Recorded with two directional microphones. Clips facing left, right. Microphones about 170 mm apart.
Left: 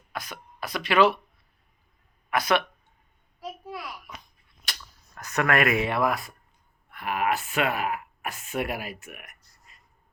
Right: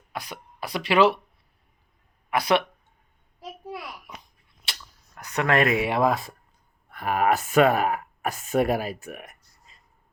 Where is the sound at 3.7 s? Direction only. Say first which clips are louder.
Right 1 dB; 25° right (ahead or behind).